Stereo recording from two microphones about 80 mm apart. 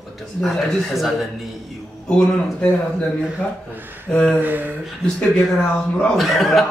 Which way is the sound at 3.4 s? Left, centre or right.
Centre.